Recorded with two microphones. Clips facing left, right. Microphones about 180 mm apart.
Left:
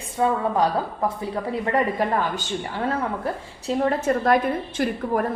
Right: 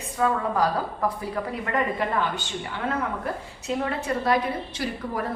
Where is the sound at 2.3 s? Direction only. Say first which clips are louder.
Left 4 dB; 40° left (ahead or behind).